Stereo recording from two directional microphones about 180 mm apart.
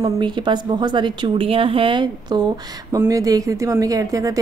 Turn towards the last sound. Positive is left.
turn(degrees=-20)  # may be behind; listen again after turning